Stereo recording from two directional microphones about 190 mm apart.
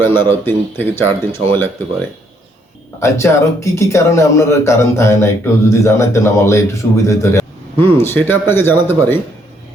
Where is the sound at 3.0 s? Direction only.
15° left (ahead or behind).